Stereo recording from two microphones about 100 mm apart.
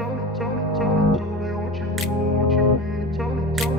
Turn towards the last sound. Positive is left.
turn(degrees=0)  # may be behind; listen again after turning